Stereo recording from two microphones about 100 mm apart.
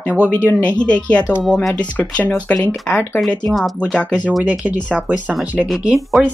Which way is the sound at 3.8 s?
10° left (ahead or behind).